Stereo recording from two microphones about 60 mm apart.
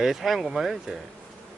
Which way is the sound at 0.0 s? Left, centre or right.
Centre.